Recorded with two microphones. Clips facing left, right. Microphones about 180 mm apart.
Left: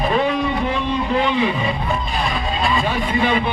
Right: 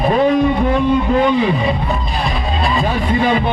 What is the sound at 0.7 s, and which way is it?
Music, 45° right (ahead or behind).